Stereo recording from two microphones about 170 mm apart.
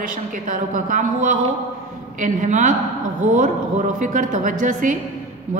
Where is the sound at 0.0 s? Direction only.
50° right (ahead or behind).